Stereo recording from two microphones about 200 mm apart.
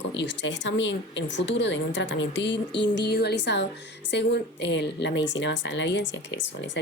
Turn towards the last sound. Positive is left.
turn(degrees=65)  # may be behind; listen again after turning